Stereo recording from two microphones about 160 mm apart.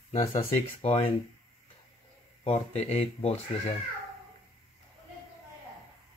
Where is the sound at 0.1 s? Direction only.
45° left (ahead or behind).